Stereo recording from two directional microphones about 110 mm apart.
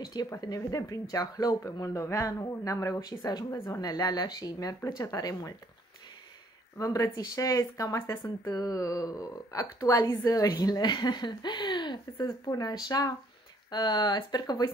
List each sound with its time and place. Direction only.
0.0 s speech: 35° left (ahead or behind)
6.8 s speech: 30° left (ahead or behind)